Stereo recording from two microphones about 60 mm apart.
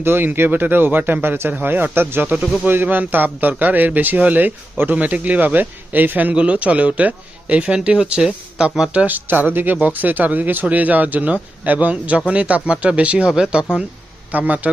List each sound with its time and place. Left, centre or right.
0.0 s speech: right
2.2 s a man's voice: centre
2.6 s a man's voice: right; by 9.0 s centre
9.0 s a man's voice: right
14.3 s a man's voice: right